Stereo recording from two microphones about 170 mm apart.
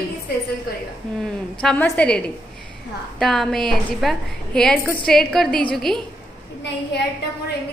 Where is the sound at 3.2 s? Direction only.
Centre (ahead or behind).